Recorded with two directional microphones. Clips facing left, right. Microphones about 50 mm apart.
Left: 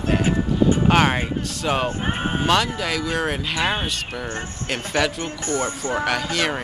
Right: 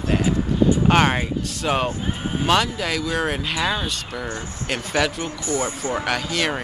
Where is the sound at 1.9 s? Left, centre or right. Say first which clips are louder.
Left 2 dB; left.